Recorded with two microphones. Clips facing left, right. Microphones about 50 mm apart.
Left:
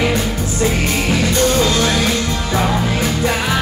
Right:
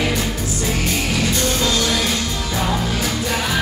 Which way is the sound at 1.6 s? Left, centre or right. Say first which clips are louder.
Left 4 dB; left.